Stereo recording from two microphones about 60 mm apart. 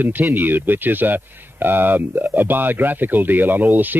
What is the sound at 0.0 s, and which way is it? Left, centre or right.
Speech, right.